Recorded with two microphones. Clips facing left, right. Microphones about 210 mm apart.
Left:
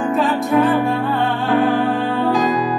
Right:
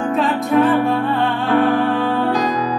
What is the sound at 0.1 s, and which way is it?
Music, centre (ahead or behind).